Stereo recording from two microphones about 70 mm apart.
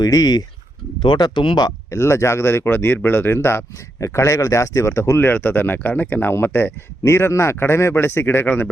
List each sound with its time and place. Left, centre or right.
0.0 s speech: left
1.1 s speech: left
1.9 s speech: left
5.2 s speech: left
7.0 s speech: left